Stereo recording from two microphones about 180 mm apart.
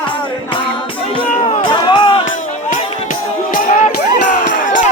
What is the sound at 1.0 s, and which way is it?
Music, 30° left (ahead or behind).